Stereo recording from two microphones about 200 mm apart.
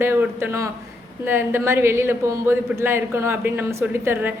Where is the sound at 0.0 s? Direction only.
10° right (ahead or behind).